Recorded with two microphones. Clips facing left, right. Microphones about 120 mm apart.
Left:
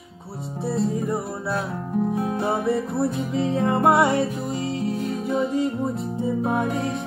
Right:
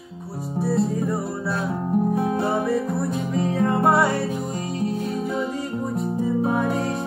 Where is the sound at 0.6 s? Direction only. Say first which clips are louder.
Right 2 dB; 20° left (ahead or behind).